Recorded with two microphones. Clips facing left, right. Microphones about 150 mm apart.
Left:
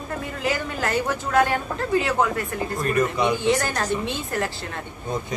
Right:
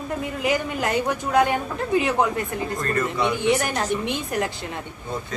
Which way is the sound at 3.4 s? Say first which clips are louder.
Right 1 dB; 15° right (ahead or behind).